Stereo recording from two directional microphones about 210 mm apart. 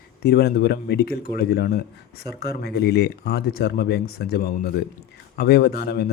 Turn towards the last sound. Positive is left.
turn(degrees=50)  # may be behind; listen again after turning